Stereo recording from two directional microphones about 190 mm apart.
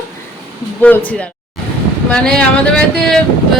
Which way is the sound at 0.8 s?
10° left (ahead or behind).